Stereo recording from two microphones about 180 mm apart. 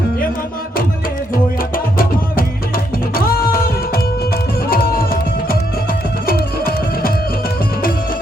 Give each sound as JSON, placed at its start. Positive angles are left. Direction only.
{"t": 1.7, "sound": "music", "side_deg": 50}